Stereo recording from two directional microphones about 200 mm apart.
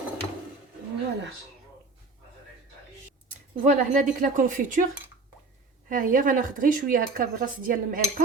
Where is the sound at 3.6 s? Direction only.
40° right (ahead or behind).